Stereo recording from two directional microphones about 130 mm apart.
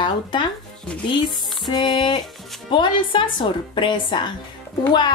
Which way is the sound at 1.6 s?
35° left (ahead or behind).